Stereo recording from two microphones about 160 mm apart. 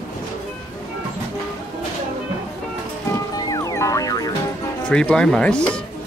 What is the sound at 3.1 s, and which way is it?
Music, 25° left (ahead or behind).